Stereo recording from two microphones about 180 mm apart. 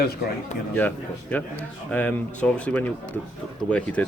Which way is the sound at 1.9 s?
10° left (ahead or behind).